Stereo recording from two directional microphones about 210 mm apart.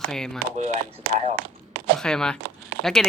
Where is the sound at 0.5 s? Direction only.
35° right (ahead or behind).